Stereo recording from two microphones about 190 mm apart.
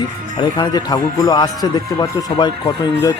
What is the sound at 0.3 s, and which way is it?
Speech, 20° left (ahead or behind).